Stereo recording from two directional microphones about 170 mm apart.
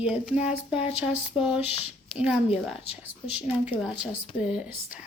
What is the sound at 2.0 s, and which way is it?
A woman's voice, 5° right (ahead or behind).